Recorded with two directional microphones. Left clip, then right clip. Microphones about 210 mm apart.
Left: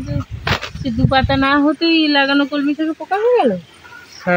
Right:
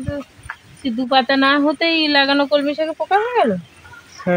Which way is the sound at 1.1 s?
35° right (ahead or behind).